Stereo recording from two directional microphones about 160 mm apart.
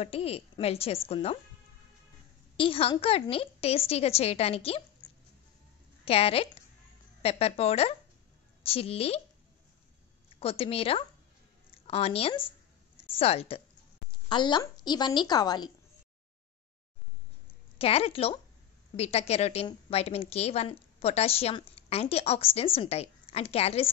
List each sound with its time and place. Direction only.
0.0 s a woman's voice: 40° left (ahead or behind)
2.5 s a woman's voice: 35° left (ahead or behind)
6.0 s a woman's voice: 35° left (ahead or behind)
10.4 s a woman's voice: 35° left (ahead or behind)
11.7 s a sound: 40° left (ahead or behind)
14.3 s a woman's voice: 30° left (ahead or behind)
17.7 s a woman's voice: 40° left (ahead or behind)